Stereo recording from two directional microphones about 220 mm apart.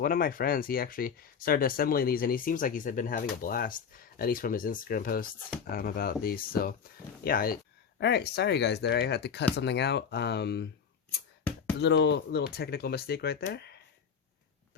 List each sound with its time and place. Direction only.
0.0 s speech: 40° left (ahead or behind)
11.8 s speech: 50° left (ahead or behind)